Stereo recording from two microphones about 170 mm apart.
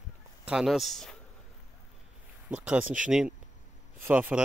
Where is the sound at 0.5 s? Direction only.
Centre (ahead or behind).